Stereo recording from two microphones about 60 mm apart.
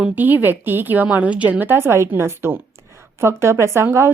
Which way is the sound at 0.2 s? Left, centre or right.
Right.